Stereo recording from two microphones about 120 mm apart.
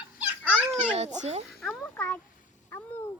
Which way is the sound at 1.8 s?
15° left (ahead or behind).